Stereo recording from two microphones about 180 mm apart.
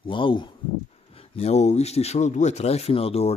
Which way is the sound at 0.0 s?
30° left (ahead or behind).